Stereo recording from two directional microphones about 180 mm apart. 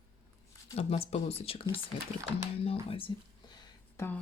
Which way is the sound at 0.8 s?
35° left (ahead or behind).